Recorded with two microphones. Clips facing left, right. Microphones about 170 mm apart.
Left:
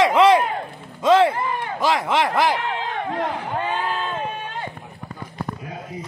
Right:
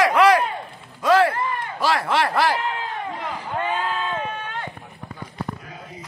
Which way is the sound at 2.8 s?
65° left (ahead or behind).